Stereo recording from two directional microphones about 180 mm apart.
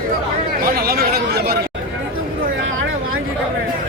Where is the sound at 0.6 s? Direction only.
55° right (ahead or behind).